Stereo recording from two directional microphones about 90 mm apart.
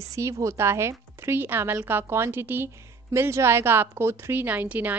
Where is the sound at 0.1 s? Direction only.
35° right (ahead or behind).